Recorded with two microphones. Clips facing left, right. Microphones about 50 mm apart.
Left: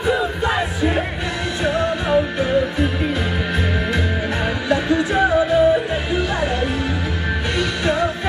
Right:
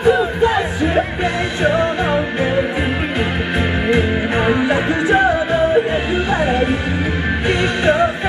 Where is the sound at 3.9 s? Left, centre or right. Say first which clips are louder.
Right 5 dB; right.